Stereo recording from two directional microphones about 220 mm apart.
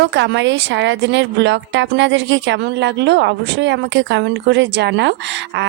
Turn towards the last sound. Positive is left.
turn(degrees=-55)  # may be behind; listen again after turning